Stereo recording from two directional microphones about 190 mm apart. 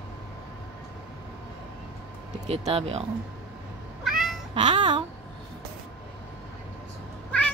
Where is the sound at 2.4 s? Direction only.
30° right (ahead or behind).